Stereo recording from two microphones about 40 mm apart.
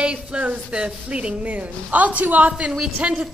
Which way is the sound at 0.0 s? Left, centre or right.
Right.